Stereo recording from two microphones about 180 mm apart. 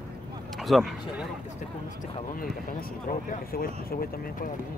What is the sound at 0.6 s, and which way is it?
Speech, centre (ahead or behind).